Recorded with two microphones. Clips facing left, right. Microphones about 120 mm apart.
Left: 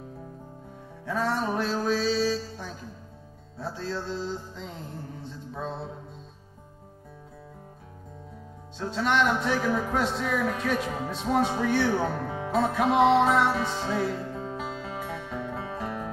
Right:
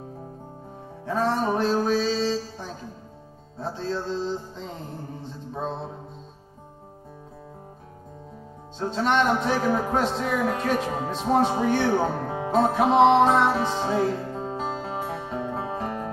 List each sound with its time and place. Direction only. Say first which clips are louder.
1.0 s music: right 4 dB; 40° right (ahead or behind)
2.1 s music: right 1 dB; 25° right (ahead or behind)
3.7 s music: right 4 dB; 25° right (ahead or behind)
5.5 s mantra: right 4 dB; 35° right (ahead or behind)
8.8 s speech: right 3 dB; 30° right (ahead or behind)
11.9 s music: right 4 dB; 25° right (ahead or behind)
12.2 s music: right 3 dB; 45° right (ahead or behind)
12.4 s music: right 4 dB; 30° right (ahead or behind)
13.1 s speech: right 3 dB; 40° right (ahead or behind)
13.6 s music: right 4 dB; 20° right (ahead or behind)
13.8 s speech: right 5 dB; 35° right (ahead or behind)
14.1 s music: right 3 dB; 30° right (ahead or behind); by 16.1 s 45° right (ahead or behind)